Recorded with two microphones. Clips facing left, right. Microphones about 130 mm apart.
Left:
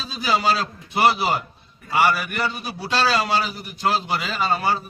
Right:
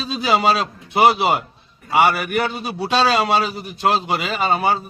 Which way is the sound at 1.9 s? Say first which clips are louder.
Right 4 dB; 70° right (ahead or behind).